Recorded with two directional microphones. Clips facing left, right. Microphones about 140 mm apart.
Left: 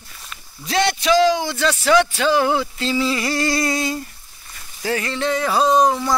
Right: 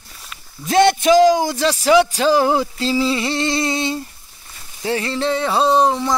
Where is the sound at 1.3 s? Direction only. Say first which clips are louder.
Right 3 dB; 40° right (ahead or behind).